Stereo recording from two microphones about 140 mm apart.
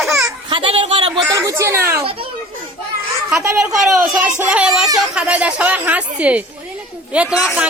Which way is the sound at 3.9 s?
20° right (ahead or behind).